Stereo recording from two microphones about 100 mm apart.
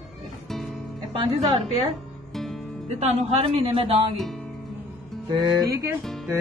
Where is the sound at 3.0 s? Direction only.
80° right.